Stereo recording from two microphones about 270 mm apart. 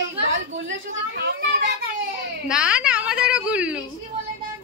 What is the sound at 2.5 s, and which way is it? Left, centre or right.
A woman's voice, centre.